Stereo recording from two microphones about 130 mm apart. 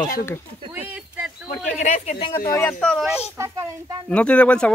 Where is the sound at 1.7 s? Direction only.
60° left (ahead or behind).